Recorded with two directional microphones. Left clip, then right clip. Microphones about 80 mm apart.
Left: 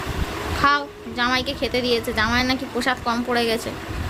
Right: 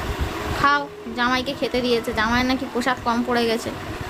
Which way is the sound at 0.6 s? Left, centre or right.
Centre.